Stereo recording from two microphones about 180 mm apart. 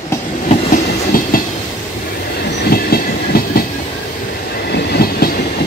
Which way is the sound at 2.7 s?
55° left (ahead or behind).